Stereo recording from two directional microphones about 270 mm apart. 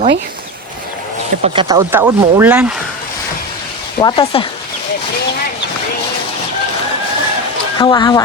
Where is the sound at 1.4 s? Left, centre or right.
Centre.